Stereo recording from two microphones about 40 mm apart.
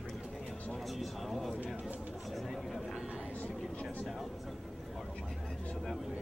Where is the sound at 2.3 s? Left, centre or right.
Centre.